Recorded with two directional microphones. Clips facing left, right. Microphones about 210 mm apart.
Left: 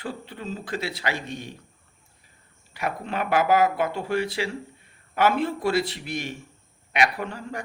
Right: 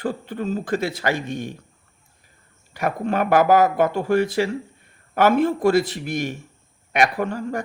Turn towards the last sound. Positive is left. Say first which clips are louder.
# right 7 dB
turn(degrees=-45)  # may be behind; listen again after turning